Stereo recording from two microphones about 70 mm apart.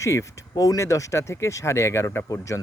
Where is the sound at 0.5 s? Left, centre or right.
Left.